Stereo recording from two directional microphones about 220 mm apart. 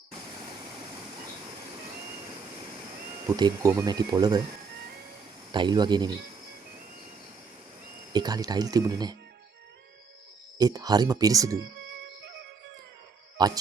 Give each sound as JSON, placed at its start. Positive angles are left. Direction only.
{"t": 3.2, "sound": "speech", "side_deg": -15}
{"t": 5.5, "sound": "speech", "side_deg": -20}
{"t": 8.1, "sound": "speech", "side_deg": -20}
{"t": 10.6, "sound": "speech", "side_deg": -15}
{"t": 13.3, "sound": "speech", "side_deg": -20}